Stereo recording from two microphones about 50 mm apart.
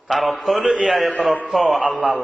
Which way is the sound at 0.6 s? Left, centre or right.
Centre.